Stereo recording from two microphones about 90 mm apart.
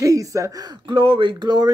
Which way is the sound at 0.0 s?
40° right (ahead or behind).